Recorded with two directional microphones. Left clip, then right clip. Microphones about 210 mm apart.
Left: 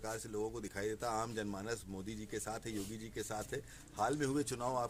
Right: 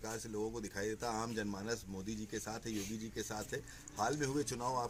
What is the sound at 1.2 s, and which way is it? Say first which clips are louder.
Speech: even; 15° left (ahead or behind).